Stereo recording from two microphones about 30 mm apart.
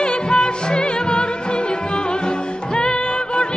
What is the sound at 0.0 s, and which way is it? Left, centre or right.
Music, left.